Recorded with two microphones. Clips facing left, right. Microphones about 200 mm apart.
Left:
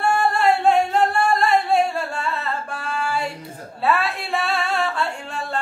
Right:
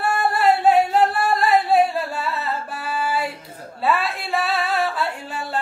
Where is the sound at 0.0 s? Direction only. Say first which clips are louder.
Even; 5° right (ahead or behind).